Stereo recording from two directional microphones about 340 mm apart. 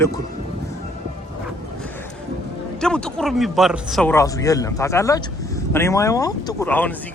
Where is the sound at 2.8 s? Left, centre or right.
Centre.